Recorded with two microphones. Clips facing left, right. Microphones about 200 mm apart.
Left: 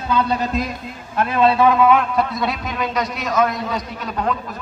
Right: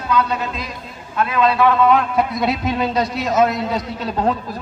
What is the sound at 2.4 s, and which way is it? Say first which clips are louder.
A man's voice: right 4 dB; 25° right (ahead or behind).